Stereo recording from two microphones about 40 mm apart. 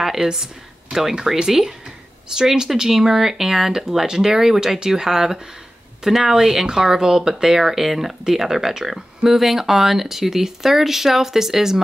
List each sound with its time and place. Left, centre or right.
0.0 s speech: centre